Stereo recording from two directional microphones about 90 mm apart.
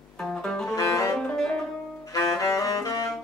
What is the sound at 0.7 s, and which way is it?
Music, 35° left (ahead or behind).